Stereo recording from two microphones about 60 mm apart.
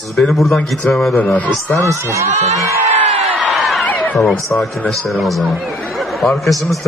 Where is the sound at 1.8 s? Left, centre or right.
Right.